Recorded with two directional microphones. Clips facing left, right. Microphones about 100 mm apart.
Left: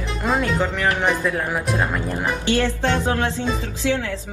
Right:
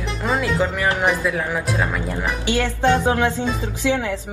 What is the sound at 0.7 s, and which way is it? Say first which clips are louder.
Speech: even; 20° right (ahead or behind).